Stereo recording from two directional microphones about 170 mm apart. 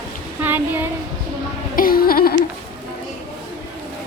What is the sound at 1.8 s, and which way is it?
Music, 60° left (ahead or behind).